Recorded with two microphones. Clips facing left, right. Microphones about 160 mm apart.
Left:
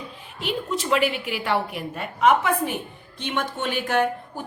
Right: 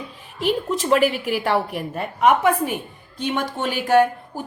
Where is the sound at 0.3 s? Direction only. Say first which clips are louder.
Right 5 dB; 45° right (ahead or behind).